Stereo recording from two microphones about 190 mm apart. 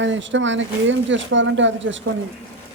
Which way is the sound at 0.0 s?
75° right (ahead or behind).